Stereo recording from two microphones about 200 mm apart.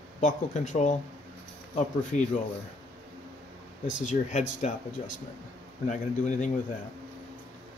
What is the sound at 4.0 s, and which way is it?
Speech, 35° left (ahead or behind).